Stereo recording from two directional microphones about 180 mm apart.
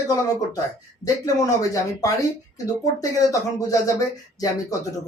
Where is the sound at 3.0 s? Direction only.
20° left (ahead or behind).